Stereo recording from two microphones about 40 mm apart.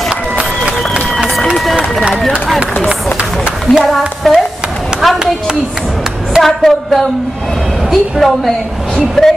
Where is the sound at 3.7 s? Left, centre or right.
Left.